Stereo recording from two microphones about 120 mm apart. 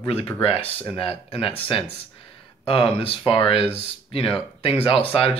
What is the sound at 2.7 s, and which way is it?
Speech, 50° left (ahead or behind).